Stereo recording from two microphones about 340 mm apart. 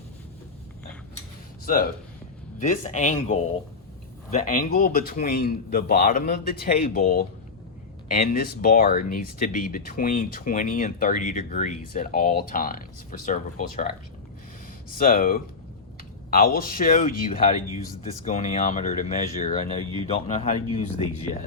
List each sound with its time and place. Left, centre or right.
1.6 s speech: left
14.9 s speech: left